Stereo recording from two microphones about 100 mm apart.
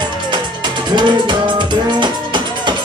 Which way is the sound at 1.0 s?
50° right (ahead or behind).